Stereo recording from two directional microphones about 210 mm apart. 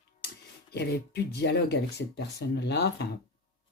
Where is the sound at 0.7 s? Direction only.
50° left (ahead or behind).